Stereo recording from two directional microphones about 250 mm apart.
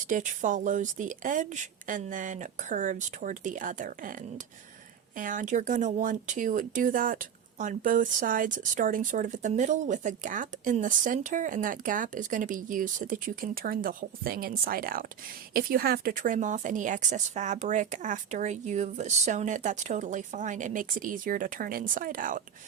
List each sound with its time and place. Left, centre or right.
0.1 s a woman's voice: right